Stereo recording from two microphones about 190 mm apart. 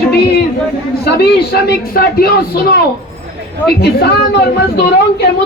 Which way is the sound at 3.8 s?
55° left (ahead or behind).